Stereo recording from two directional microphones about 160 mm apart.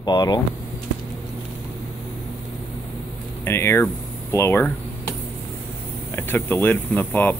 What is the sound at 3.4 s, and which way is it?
Speech, 15° left (ahead or behind).